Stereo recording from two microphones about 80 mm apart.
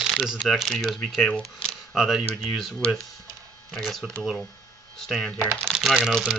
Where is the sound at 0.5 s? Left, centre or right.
Centre.